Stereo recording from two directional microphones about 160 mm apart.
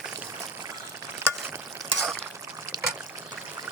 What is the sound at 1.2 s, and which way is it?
Frying, 15° right (ahead or behind).